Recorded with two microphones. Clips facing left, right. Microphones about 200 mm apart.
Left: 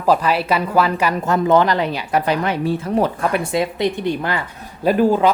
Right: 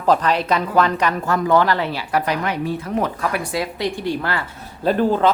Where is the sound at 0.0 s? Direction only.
10° left (ahead or behind).